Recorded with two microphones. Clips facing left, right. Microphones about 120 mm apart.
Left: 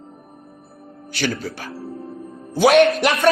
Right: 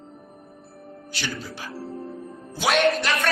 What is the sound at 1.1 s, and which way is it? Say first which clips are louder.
Speech: left 9 dB; 60° left (ahead or behind).